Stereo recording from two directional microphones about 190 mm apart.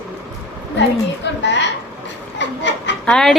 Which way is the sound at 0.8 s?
65° left (ahead or behind).